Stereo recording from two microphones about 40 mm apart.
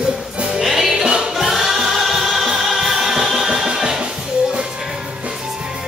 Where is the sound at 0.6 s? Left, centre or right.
Centre.